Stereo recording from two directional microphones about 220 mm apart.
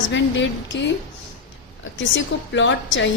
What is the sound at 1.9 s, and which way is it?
A woman's voice, 55° left (ahead or behind).